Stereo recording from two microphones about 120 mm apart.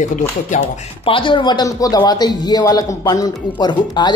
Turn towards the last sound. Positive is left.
turn(degrees=40)  # may be behind; listen again after turning